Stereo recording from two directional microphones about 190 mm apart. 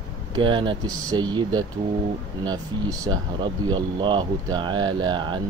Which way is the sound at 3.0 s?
20° right (ahead or behind).